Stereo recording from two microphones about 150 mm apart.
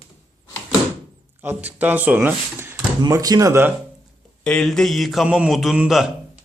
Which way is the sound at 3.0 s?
25° right (ahead or behind).